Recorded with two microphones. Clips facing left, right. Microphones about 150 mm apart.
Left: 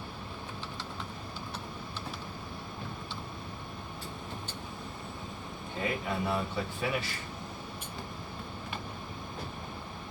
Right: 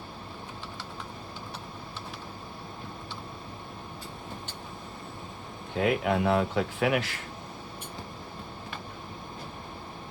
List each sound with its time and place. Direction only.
5.8 s speech: 80° right